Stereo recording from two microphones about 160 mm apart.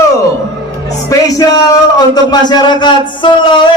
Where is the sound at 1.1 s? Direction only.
20° left (ahead or behind).